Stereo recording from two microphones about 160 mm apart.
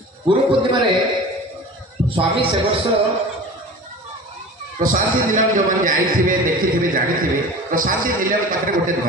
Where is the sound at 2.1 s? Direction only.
35° right (ahead or behind).